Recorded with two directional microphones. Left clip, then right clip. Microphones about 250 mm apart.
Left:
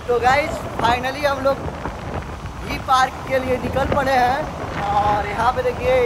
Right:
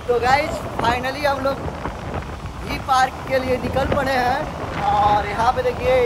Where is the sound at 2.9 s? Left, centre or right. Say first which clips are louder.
Left 1 dB; centre.